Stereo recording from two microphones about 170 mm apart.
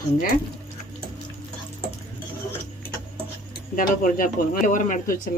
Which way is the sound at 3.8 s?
50° left (ahead or behind).